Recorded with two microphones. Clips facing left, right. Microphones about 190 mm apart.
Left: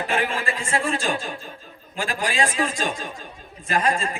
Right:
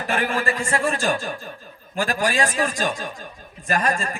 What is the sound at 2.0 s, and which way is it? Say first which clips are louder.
Speech: right 3 dB; 45° right (ahead or behind).